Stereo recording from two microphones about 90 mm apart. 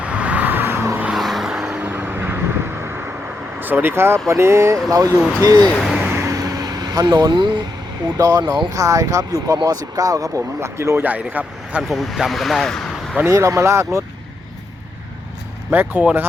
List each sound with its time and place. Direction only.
0.0 s vehicle: 15° right (ahead or behind)
1.1 s vehicle: centre (ahead or behind)
1.8 s vehicle: 20° right (ahead or behind)
3.6 s speech: 20° right (ahead or behind); by 5.6 s 40° right (ahead or behind)
6.1 s vehicle: 30° right (ahead or behind); by 7.6 s 55° right (ahead or behind)
8.2 s speech: 45° right (ahead or behind)
8.7 s speech: 40° right (ahead or behind)
11.0 s speech: 20° right (ahead or behind)
11.8 s speech: centre (ahead or behind)
13.3 s speech: 35° right (ahead or behind)
15.7 s speech: 20° right (ahead or behind)